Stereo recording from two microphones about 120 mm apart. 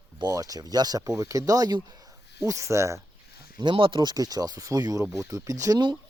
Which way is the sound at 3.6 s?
45° right (ahead or behind).